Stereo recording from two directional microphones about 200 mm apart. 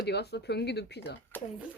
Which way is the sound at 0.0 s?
55° left (ahead or behind).